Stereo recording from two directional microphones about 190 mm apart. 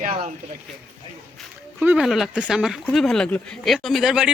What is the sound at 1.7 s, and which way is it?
Speech, 5° right (ahead or behind).